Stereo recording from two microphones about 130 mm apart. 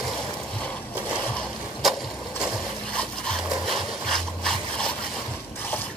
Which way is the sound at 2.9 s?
5° left (ahead or behind).